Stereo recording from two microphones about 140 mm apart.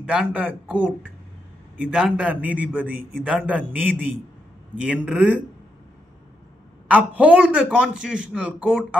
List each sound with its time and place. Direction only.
0.0 s a man's voice: 5° right (ahead or behind)
2.9 s a man's voice: 90° right
3.3 s a man's voice: 10° right (ahead or behind)
6.9 s a man's voice: 10° right (ahead or behind)